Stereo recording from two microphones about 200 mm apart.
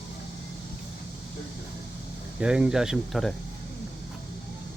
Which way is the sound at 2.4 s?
5° right (ahead or behind).